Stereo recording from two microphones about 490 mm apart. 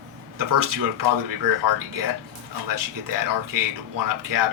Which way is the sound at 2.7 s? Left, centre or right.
Right.